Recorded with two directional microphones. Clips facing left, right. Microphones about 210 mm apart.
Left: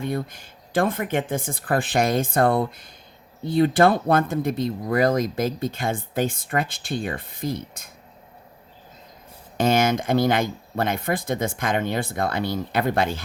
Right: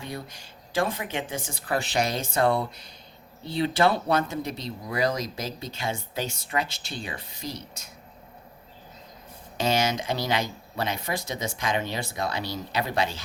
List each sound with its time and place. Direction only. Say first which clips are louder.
0.0 s speech: left 9 dB; 50° left (ahead or behind)
9.6 s speech: left 5 dB; 55° left (ahead or behind)